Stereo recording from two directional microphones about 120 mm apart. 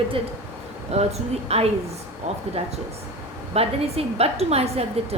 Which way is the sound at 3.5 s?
55° right (ahead or behind).